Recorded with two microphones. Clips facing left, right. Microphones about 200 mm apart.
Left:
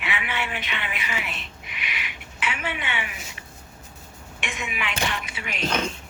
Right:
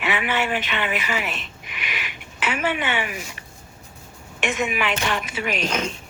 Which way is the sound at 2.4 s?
45° right (ahead or behind).